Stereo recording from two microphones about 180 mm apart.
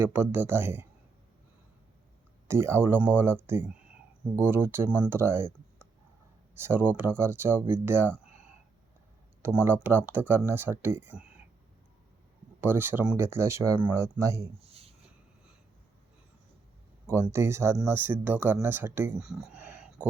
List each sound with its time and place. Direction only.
0.0 s speech: 10° right (ahead or behind)
2.5 s speech: 15° right (ahead or behind)
9.6 s speech: 10° right (ahead or behind)
12.5 s speech: 10° right (ahead or behind)
14.6 s a sound: 35° right (ahead or behind)
17.1 s speech: 15° right (ahead or behind)
19.2 s a sound: 5° right (ahead or behind)